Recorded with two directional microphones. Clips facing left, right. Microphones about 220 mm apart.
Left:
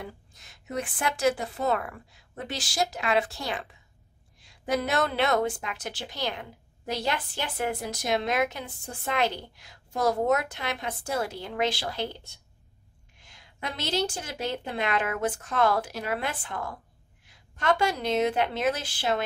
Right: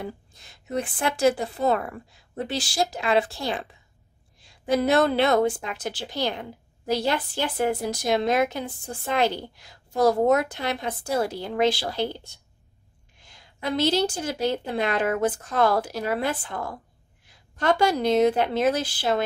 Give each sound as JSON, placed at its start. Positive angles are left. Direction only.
{"t": 0.0, "sound": "speech", "side_deg": -30}
{"t": 13.3, "sound": "speech", "side_deg": -35}